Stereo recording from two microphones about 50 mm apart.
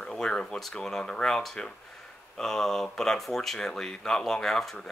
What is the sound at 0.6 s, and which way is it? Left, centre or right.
Speech, centre.